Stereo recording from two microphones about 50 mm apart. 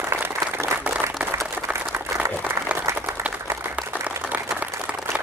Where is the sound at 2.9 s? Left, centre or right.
Right.